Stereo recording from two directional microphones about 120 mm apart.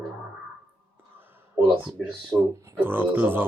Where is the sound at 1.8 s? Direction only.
5° right (ahead or behind).